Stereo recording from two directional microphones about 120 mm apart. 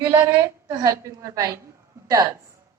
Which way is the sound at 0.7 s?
25° right (ahead or behind).